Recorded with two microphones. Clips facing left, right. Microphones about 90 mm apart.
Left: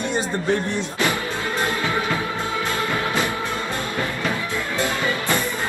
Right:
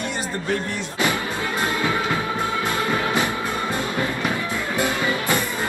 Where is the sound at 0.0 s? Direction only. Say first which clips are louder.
Left 4 dB; 25° left (ahead or behind).